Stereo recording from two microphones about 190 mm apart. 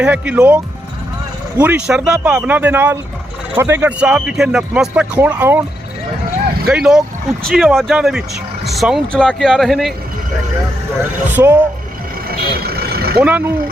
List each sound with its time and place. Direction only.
0.0 s speech: 10° right (ahead or behind)
6.7 s speech: 5° right (ahead or behind)
11.3 s speech: 10° right (ahead or behind)
12.3 s vehicle: 55° right (ahead or behind)
13.2 s speech: 10° right (ahead or behind)